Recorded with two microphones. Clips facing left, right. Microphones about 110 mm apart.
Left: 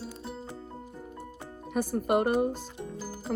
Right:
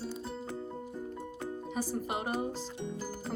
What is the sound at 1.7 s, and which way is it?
Speech, 55° left (ahead or behind).